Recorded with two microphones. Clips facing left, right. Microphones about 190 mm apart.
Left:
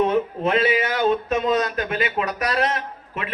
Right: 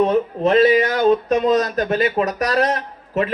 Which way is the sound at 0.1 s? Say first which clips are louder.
Right 4 dB; 40° right (ahead or behind).